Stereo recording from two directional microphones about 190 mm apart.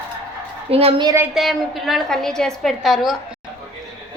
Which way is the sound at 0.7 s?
30° right (ahead or behind).